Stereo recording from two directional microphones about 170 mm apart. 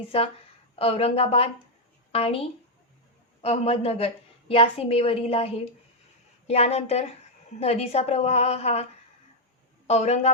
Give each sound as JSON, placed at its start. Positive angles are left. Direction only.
{"t": 0.1, "sound": "a woman's voice", "side_deg": 35}